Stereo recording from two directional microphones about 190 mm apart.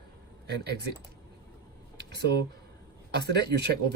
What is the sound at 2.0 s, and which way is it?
Speech, 60° right (ahead or behind).